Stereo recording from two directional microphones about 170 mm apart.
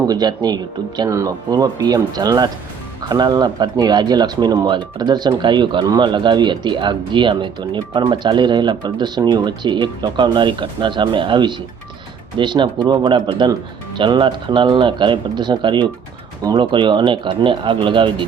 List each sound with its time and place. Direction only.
0.1 s speech: 25° right (ahead or behind)